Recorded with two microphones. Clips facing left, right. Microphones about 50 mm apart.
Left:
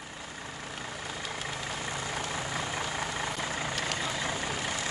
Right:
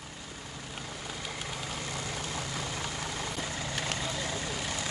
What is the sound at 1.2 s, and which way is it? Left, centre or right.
Vehicle, centre.